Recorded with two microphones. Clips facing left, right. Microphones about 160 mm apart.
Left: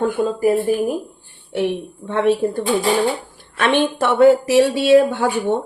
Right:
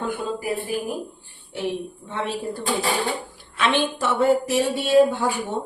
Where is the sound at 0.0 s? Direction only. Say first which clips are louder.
Left 9 dB; 45° left (ahead or behind).